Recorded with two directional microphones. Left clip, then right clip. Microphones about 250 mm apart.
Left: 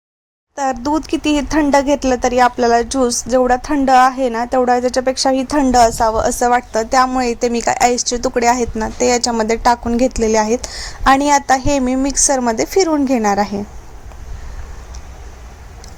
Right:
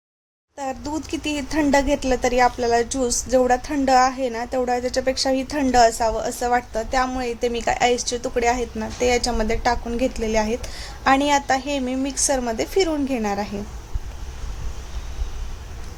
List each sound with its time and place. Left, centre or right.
0.5 s speech: centre